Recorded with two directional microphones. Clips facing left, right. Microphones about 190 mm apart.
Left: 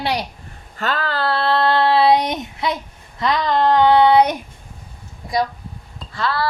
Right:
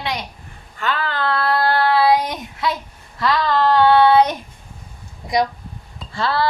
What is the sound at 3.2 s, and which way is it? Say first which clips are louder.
Child singing: even; 20° left (ahead or behind).